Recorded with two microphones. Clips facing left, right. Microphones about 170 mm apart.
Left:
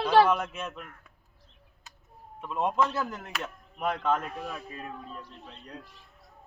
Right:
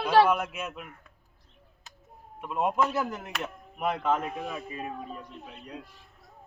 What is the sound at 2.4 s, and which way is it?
Speech, 10° right (ahead or behind).